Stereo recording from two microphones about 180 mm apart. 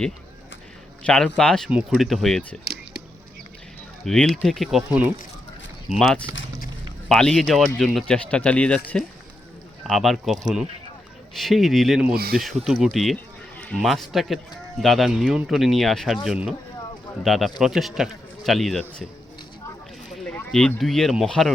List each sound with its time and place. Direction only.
1.0 s a man's voice: 5° left (ahead or behind)
4.0 s a man's voice: 5° left (ahead or behind)
5.9 s a man's voice: centre (ahead or behind)
11.3 s a man's voice: centre (ahead or behind)
12.1 s speech: 55° right (ahead or behind)
12.6 s a man's voice: centre (ahead or behind)
20.1 s speech: 5° left (ahead or behind)